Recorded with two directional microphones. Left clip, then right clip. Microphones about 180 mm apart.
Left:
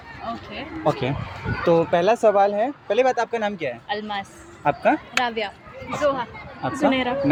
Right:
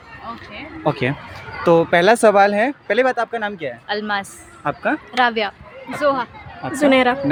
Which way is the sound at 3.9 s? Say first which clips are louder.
Right 5 dB; 50° right (ahead or behind).